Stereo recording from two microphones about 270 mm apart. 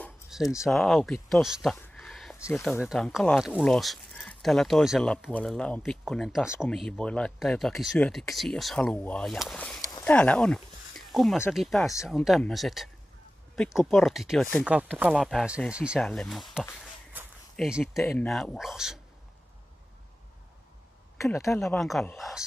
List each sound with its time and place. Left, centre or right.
0.0 s speech: centre
21.2 s speech: centre